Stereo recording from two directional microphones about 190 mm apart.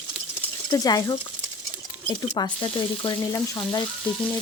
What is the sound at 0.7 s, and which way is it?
Frying, 20° left (ahead or behind).